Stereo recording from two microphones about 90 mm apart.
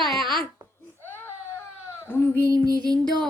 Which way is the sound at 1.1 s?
25° left (ahead or behind).